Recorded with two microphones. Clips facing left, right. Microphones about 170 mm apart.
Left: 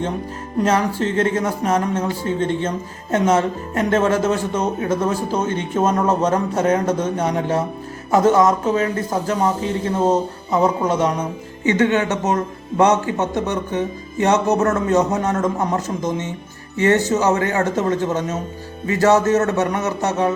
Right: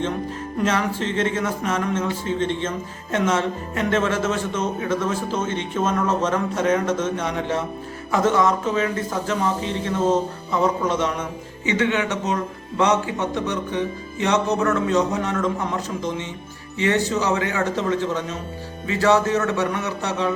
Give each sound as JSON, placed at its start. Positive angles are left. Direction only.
{"t": 0.6, "sound": "speech", "side_deg": 40}